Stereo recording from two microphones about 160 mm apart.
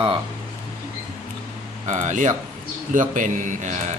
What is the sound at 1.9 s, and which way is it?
A man's voice, 50° right (ahead or behind).